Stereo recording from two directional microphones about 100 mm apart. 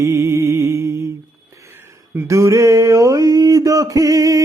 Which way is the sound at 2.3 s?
30° right (ahead or behind).